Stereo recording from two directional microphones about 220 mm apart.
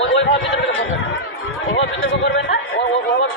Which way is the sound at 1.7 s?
55° left (ahead or behind).